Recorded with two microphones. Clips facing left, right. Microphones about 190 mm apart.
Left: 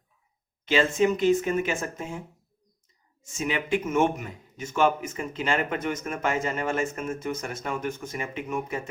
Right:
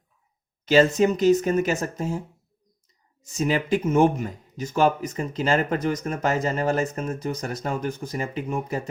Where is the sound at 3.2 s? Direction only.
35° right (ahead or behind).